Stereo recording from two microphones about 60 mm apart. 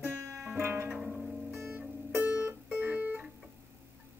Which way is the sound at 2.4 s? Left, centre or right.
Right.